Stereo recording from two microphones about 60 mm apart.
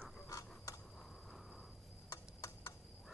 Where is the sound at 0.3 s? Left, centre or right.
Left.